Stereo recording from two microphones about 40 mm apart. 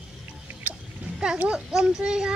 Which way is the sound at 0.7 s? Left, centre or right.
Right.